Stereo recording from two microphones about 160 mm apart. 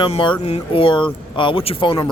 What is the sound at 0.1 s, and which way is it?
Speech, 35° left (ahead or behind).